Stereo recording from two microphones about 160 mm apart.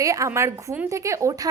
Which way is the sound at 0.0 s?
20° right (ahead or behind).